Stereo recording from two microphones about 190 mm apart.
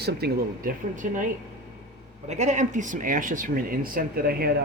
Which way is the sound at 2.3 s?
40° right (ahead or behind).